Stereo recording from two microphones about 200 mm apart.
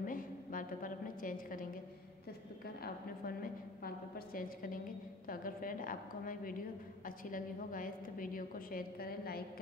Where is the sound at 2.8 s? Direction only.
50° left (ahead or behind).